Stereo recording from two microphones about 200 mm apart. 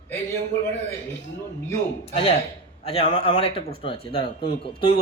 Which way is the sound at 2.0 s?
30° left (ahead or behind).